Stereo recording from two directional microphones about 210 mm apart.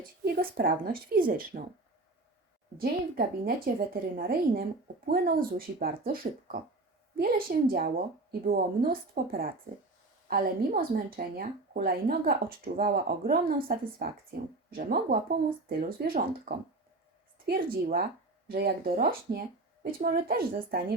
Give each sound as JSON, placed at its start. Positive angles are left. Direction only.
{"t": 0.3, "sound": "speech", "side_deg": -45}
{"t": 2.7, "sound": "speech", "side_deg": -45}